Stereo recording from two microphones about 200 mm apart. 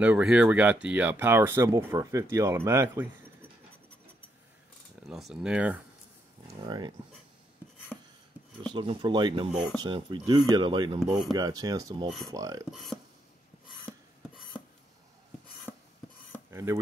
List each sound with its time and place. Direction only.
0.0 s speech: 5° right (ahead or behind)
5.0 s speech: centre (ahead or behind)
6.4 s speech: 20° right (ahead or behind)
8.7 s speech: 25° right (ahead or behind)
12.7 s speech: centre (ahead or behind)
15.7 s filing: 10° left (ahead or behind)
16.4 s dishes: 15° right (ahead or behind)